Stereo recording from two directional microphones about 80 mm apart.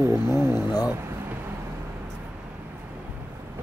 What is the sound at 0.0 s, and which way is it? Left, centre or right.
Speech, right.